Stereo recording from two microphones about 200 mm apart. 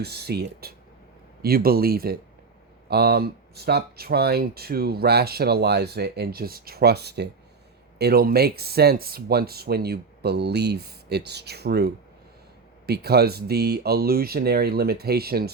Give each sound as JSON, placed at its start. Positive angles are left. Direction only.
{"t": 0.0, "sound": "speech", "side_deg": -55}